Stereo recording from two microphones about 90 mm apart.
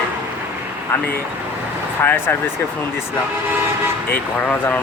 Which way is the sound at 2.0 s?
20° left (ahead or behind).